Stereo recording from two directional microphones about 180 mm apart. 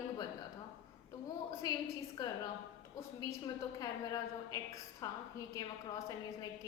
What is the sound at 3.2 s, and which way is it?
A woman's voice, 20° left (ahead or behind).